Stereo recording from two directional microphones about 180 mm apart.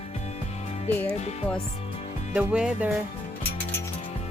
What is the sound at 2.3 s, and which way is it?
Speech, 5° right (ahead or behind).